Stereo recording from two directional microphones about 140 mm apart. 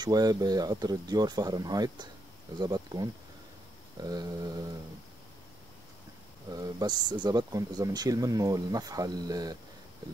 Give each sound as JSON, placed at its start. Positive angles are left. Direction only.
{"t": 0.0, "sound": "speech", "side_deg": -30}
{"t": 6.5, "sound": "speech", "side_deg": -30}